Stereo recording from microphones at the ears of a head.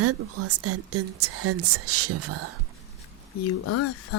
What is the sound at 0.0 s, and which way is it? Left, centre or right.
Speech, right.